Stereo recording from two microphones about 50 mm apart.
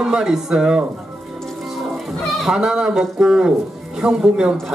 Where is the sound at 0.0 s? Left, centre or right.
Centre.